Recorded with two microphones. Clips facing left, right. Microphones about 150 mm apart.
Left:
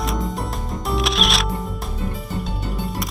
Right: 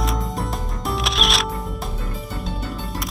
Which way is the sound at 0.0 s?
Centre (ahead or behind).